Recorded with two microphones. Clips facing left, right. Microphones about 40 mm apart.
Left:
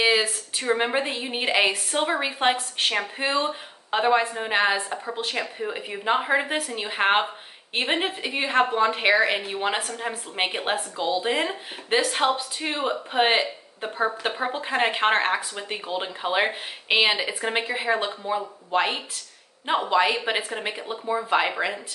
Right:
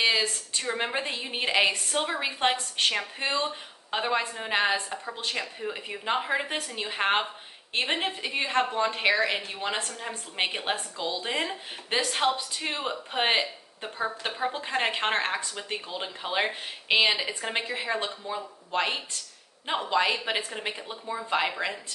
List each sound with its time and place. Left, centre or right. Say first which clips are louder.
0.0 s a sound: left 4 dB; centre
0.7 s a woman's voice: left 5 dB; centre
3.3 s a woman's voice: left 3 dB; centre